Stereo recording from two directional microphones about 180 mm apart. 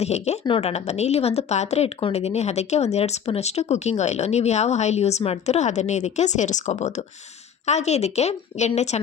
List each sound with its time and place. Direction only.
0.0 s a woman's voice: 35° left (ahead or behind)